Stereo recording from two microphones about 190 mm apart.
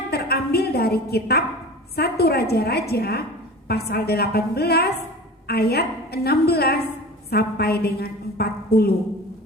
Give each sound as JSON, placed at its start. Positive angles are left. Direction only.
{"t": 0.1, "sound": "a woman's voice", "side_deg": 55}